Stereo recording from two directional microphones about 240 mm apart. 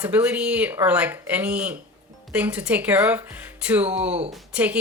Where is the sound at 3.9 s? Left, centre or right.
Right.